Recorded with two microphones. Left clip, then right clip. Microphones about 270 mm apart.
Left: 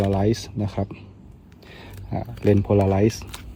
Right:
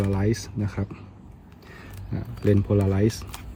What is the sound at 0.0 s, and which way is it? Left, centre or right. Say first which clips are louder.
Speech: left 5 dB; centre.